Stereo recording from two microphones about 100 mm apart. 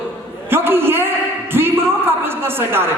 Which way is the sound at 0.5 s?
25° right (ahead or behind).